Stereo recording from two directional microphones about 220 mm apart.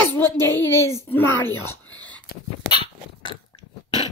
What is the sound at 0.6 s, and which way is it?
Speech, 10° left (ahead or behind).